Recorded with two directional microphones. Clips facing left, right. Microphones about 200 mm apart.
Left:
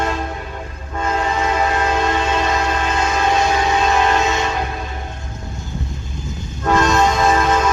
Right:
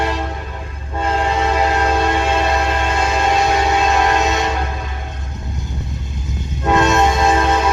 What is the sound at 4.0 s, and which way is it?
Train, 15° right (ahead or behind).